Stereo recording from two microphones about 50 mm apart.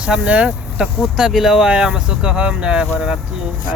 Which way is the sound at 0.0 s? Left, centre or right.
Right.